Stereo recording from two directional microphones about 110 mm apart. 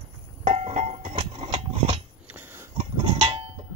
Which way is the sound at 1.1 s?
55° right (ahead or behind).